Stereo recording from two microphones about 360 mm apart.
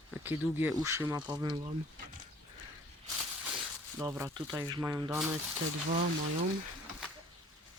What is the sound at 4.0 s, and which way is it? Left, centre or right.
Speech, centre.